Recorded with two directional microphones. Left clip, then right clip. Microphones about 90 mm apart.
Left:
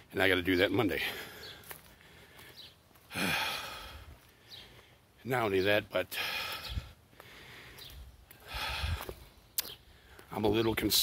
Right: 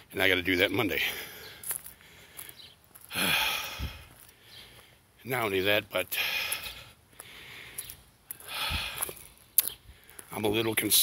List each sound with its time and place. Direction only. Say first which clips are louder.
0.1 s speech: right 3 dB; 30° left (ahead or behind)
2.0 s a sound: right 1 dB; 15° left (ahead or behind)
3.1 s gasp: right 5 dB; 20° left (ahead or behind)
5.2 s a man's voice: right 1 dB; 40° left (ahead or behind)
5.5 s a sound: right 3 dB; 25° left (ahead or behind)
10.3 s speech: right 2 dB; 35° left (ahead or behind)